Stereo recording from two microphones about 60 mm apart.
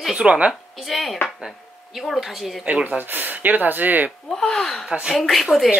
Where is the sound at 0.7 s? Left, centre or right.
Centre.